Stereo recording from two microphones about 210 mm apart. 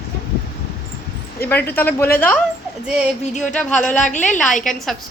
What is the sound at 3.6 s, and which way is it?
Speech, 5° left (ahead or behind).